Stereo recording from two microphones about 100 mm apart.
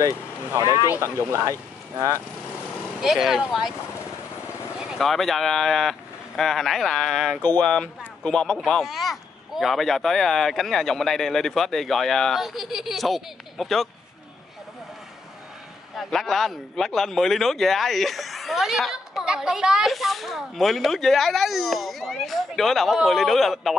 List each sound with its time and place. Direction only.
0.9 s speech: 25° right (ahead or behind)
3.0 s speech: 5° right (ahead or behind)
4.8 s speech: centre (ahead or behind)
16.0 s speech: centre (ahead or behind)